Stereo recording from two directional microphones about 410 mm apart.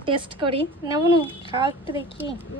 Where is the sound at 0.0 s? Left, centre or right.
Centre.